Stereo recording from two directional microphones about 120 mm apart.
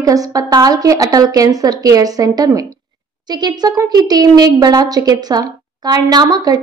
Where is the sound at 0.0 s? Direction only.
30° right (ahead or behind).